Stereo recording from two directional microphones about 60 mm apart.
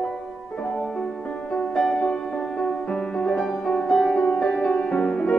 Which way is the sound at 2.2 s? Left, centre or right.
Centre.